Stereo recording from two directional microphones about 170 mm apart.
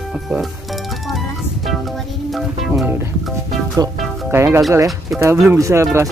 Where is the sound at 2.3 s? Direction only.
Centre (ahead or behind).